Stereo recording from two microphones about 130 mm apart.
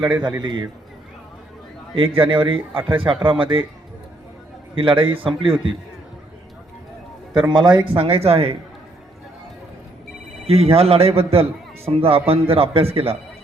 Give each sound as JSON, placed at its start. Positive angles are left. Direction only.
{"t": 0.0, "sound": "a man's voice", "side_deg": -35}
{"t": 2.0, "sound": "a man's voice", "side_deg": -40}
{"t": 4.7, "sound": "a man's voice", "side_deg": -40}
{"t": 7.5, "sound": "speech", "side_deg": -35}
{"t": 10.4, "sound": "speech", "side_deg": -50}